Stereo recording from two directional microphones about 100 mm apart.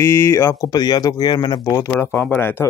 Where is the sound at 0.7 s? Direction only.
40° left (ahead or behind).